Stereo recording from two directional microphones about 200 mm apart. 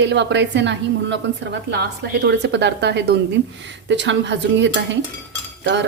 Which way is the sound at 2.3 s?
60° right (ahead or behind).